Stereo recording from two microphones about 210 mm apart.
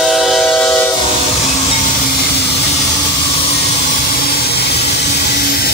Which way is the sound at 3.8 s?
45° left (ahead or behind).